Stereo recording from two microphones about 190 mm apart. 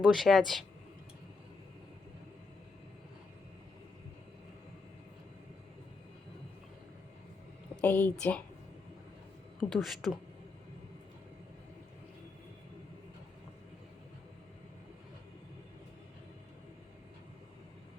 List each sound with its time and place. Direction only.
0.0 s speech: centre (ahead or behind)
7.8 s speech: 10° left (ahead or behind)
9.6 s speech: centre (ahead or behind)